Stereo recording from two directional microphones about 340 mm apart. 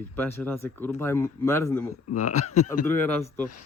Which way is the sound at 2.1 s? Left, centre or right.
Left.